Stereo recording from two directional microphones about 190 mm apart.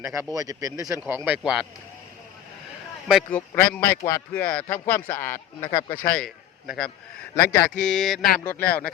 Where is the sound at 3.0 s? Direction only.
Centre (ahead or behind).